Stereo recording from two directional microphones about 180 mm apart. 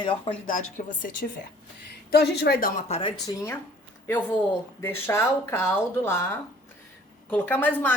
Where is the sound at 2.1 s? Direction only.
65° left (ahead or behind).